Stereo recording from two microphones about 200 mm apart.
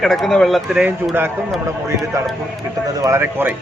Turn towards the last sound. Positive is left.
turn(degrees=-10)  # may be behind; listen again after turning